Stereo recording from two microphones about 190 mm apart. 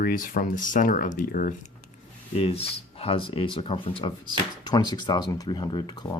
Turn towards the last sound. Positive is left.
turn(degrees=20)  # may be behind; listen again after turning